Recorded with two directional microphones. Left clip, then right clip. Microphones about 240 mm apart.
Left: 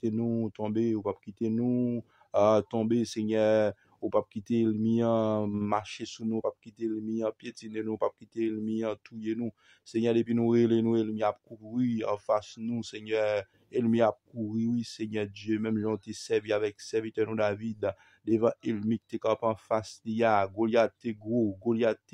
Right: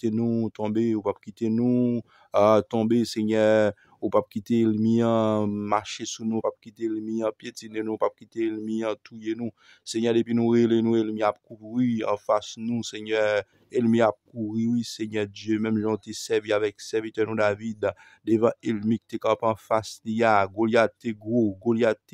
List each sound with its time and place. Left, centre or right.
0.0 s speech: right